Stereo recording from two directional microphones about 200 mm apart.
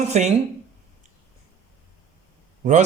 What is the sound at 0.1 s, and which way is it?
Speech, 35° right (ahead or behind).